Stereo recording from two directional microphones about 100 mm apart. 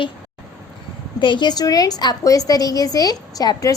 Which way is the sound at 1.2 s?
50° left (ahead or behind).